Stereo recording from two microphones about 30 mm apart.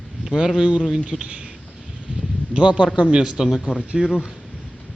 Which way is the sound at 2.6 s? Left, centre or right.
Right.